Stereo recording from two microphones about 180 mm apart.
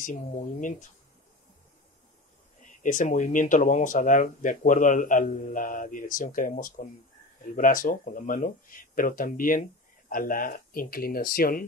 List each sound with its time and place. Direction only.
0.0 s speech: 45° left (ahead or behind)
2.8 s speech: 45° left (ahead or behind)